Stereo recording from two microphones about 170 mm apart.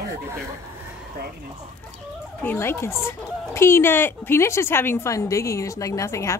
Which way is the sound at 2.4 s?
10° left (ahead or behind).